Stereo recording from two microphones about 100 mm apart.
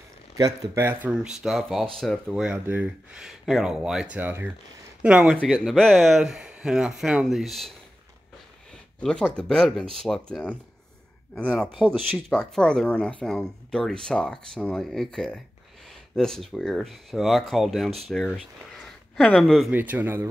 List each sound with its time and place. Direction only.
0.4 s speech: 30° right (ahead or behind)
1.1 s speech: 5° right (ahead or behind)
2.2 s speech: 10° right (ahead or behind)
3.2 s speech: centre (ahead or behind)
4.2 s speech: 20° right (ahead or behind)
5.0 s speech: 10° right (ahead or behind)
5.3 s speech: 5° left (ahead or behind)
9.0 s speech: 10° left (ahead or behind)
11.8 s speech: 15° right (ahead or behind)
12.3 s speech: 10° left (ahead or behind)
19.7 s speech: 15° right (ahead or behind)